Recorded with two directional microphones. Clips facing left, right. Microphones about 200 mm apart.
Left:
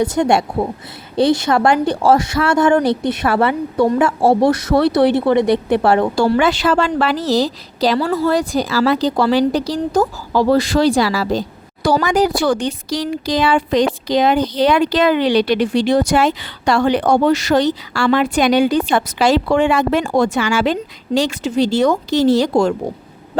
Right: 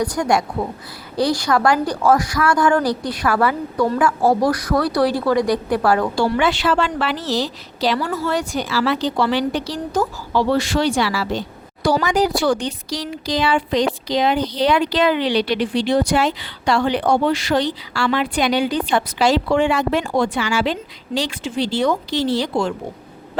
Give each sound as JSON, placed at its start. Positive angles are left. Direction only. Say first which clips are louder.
{"t": 0.0, "sound": "a woman's voice", "louder": "left 4 dB", "side_deg": 25}
{"t": 6.1, "sound": "a woman's voice", "louder": "left 4 dB", "side_deg": 40}